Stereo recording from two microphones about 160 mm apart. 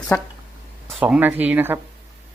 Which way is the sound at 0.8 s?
10° right (ahead or behind).